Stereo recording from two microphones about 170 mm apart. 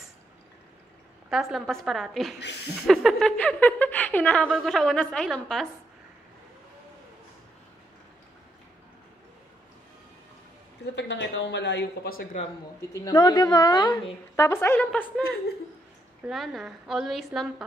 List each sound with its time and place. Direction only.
1.3 s a woman's voice: centre (ahead or behind)
2.4 s a sound: 80° left
2.9 s a woman's voice: centre (ahead or behind)
11.0 s speech: 90° left; by 12.3 s 65° left (ahead or behind)
12.9 s a woman's voice: 20° left (ahead or behind); by 15.2 s 5° left (ahead or behind)
16.3 s a woman's voice: centre (ahead or behind)